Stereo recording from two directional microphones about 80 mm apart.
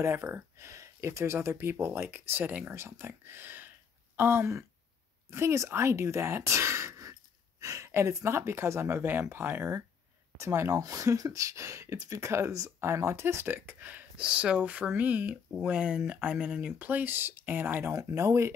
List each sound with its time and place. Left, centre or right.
0.0 s speech: right
17.9 s speech: right